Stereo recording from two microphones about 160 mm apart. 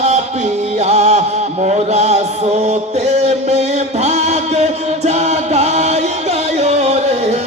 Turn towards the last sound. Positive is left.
turn(degrees=-45)  # may be behind; listen again after turning